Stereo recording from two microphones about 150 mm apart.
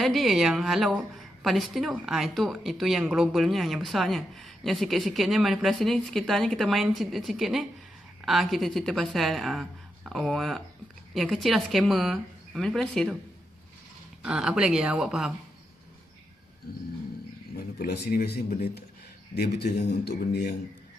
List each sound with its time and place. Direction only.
0.0 s a woman's voice: centre (ahead or behind)
14.2 s a woman's voice: 5° right (ahead or behind)
17.7 s speech: 90° left